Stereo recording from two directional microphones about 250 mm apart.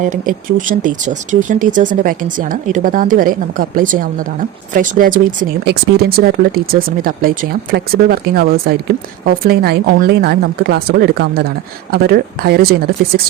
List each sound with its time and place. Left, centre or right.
0.0 s speech: right